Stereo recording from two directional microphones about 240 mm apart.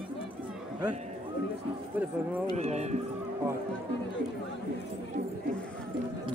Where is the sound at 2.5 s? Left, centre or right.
Right.